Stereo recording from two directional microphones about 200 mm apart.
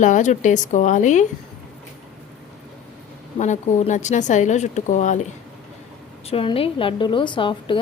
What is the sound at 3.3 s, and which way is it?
A woman's voice, 35° left (ahead or behind).